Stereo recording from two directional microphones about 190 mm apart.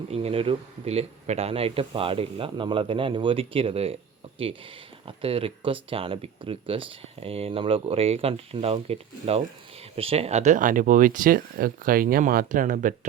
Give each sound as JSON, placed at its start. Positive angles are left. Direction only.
{"t": 0.1, "sound": "speech", "side_deg": -30}
{"t": 5.0, "sound": "speech", "side_deg": -30}